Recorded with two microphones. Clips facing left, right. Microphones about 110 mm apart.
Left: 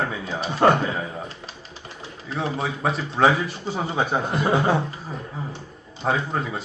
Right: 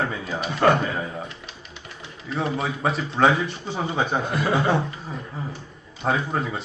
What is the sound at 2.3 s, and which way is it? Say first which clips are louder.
A man's voice: right 1 dB; centre (ahead or behind).